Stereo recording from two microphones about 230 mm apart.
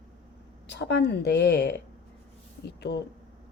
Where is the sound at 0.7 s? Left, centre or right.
Left.